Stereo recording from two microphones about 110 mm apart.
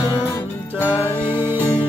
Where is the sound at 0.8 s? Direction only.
25° left (ahead or behind).